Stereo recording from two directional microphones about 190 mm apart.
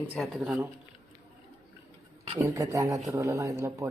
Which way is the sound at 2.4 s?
15° right (ahead or behind).